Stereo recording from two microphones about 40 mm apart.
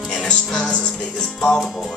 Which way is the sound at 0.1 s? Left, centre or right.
Centre.